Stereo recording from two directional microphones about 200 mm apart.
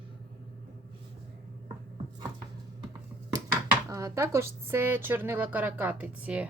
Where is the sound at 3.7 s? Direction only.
15° right (ahead or behind).